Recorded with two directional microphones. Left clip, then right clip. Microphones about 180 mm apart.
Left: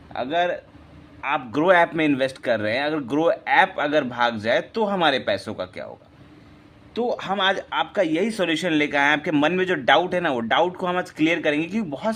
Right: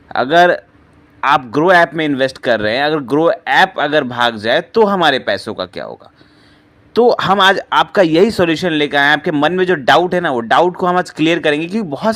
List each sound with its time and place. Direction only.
0.1 s speech: 45° right (ahead or behind)
1.5 s speech: 25° right (ahead or behind)
6.9 s speech: 45° right (ahead or behind)